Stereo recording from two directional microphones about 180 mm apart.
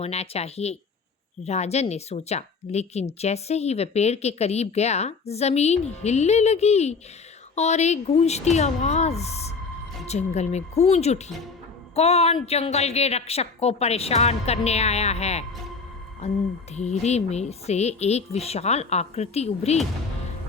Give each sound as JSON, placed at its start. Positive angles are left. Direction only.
{"t": 0.0, "sound": "speech", "side_deg": 35}